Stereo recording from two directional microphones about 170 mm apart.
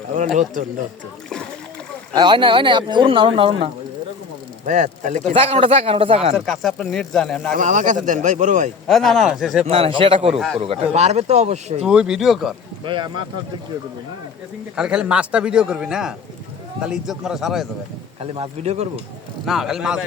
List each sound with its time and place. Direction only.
2.1 s speech: 25° right (ahead or behind)
4.6 s a man's voice: 45° right (ahead or behind)
5.3 s speech: 35° right (ahead or behind)
6.3 s a man's voice: centre (ahead or behind)
7.5 s a man's voice: 50° right (ahead or behind)
8.9 s a man's voice: centre (ahead or behind)
9.6 s speech: 35° right (ahead or behind)
11.9 s a man's voice: 5° right (ahead or behind)
12.8 s speech: 30° right (ahead or behind)
14.8 s a man's voice: 5° right (ahead or behind)
18.2 s speech: 35° right (ahead or behind)
19.5 s a man's voice: centre (ahead or behind)